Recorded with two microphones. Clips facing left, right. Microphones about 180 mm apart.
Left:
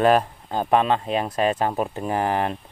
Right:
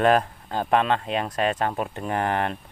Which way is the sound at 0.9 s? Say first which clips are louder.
Left 2 dB; 35° left (ahead or behind).